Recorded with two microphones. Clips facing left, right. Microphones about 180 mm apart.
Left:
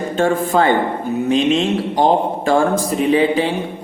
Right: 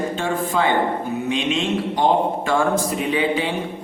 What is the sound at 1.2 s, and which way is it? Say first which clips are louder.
A man's voice: left 8 dB; 35° left (ahead or behind).